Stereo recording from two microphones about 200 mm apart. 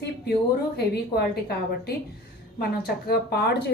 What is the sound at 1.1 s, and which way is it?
A woman's voice, 55° left (ahead or behind).